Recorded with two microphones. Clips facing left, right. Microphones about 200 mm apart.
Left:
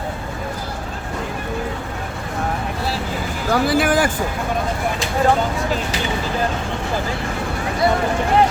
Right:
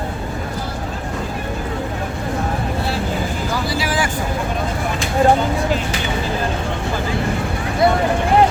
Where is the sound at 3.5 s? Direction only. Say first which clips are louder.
Left 7 dB; 55° left (ahead or behind).